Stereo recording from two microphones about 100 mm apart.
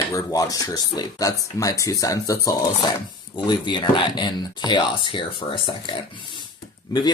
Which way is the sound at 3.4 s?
50° left (ahead or behind).